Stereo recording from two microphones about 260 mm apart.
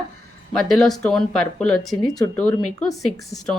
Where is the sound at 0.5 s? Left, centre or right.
Centre.